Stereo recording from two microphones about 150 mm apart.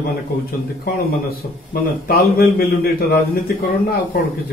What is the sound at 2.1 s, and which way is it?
Speech, 85° left.